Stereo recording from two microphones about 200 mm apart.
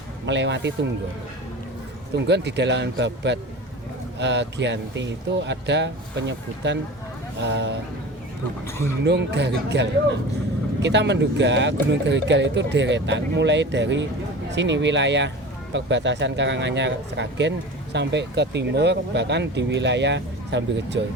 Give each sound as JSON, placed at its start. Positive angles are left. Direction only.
{"t": 0.3, "sound": "speech", "side_deg": -60}
{"t": 2.1, "sound": "speech", "side_deg": -60}
{"t": 9.0, "sound": "speech", "side_deg": -60}